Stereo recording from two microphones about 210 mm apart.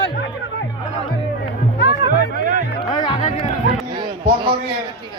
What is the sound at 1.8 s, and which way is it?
Music, 55° left (ahead or behind).